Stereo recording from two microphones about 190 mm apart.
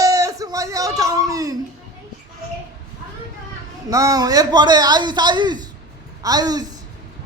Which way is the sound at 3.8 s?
20° right (ahead or behind).